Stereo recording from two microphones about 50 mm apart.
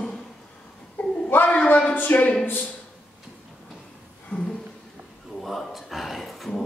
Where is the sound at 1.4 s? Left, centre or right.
Left.